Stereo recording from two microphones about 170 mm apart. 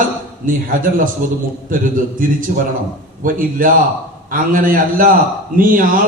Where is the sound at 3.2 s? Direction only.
55° right (ahead or behind).